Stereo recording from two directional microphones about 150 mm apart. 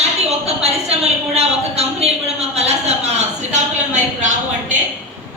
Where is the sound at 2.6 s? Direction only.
45° right (ahead or behind).